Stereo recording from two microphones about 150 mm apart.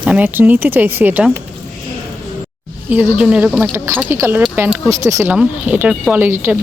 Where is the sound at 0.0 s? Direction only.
10° right (ahead or behind).